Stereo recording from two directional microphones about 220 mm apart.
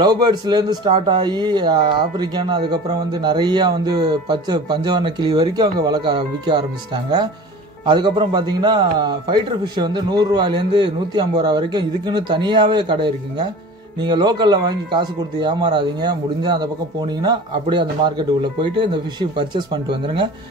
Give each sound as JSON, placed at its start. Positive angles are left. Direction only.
{"t": 0.0, "sound": "speech", "side_deg": -20}
{"t": 7.8, "sound": "speech", "side_deg": -20}